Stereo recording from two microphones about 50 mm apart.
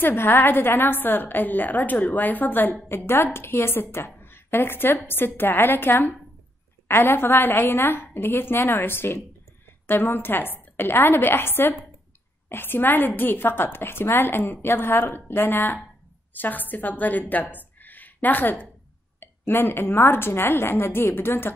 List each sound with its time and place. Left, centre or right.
0.0 s a woman's voice: left
3.3 s a woman's voice: left